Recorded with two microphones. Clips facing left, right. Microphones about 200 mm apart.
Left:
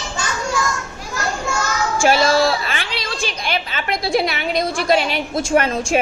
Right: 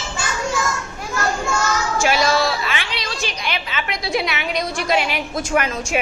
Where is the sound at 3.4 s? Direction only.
45° left (ahead or behind).